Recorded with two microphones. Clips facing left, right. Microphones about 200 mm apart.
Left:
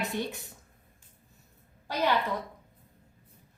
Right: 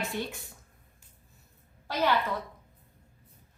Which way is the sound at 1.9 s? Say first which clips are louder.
Right 1 dB; 15° left (ahead or behind).